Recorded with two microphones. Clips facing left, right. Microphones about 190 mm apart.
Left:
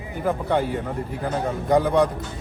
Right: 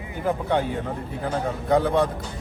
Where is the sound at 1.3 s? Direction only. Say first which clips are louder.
Left 1 dB; 15° left (ahead or behind).